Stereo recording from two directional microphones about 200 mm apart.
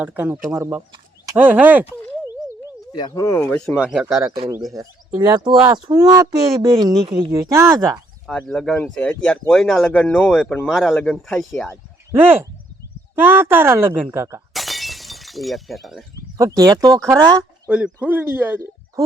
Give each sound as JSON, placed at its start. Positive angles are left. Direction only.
{"t": 0.0, "sound": "speech", "side_deg": -10}
{"t": 2.9, "sound": "speech", "side_deg": 20}
{"t": 3.8, "sound": "speech", "side_deg": -5}
{"t": 4.7, "sound": "speech", "side_deg": -20}
{"t": 8.3, "sound": "speech", "side_deg": 0}
{"t": 13.1, "sound": "speech", "side_deg": -10}
{"t": 14.5, "sound": "breaking", "side_deg": 0}
{"t": 16.4, "sound": "speech", "side_deg": -15}